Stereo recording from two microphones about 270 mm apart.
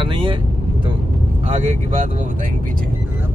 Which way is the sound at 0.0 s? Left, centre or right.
Centre.